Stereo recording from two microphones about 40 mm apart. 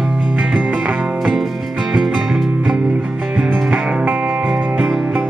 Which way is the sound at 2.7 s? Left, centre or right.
Right.